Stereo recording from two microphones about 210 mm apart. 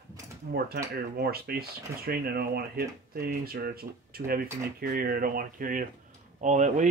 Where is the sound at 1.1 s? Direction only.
45° right (ahead or behind).